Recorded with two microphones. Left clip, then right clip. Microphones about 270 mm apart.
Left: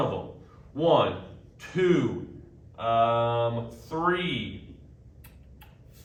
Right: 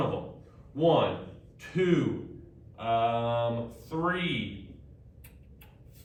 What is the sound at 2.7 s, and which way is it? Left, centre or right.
Speech, centre.